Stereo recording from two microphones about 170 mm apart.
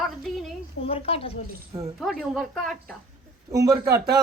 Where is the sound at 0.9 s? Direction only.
35° left (ahead or behind).